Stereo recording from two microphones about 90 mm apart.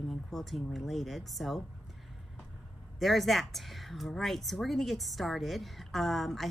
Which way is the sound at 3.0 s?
Centre (ahead or behind).